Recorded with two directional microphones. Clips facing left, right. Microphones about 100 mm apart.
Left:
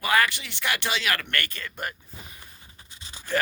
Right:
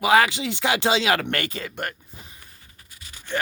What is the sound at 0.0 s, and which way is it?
Speech, 90° right.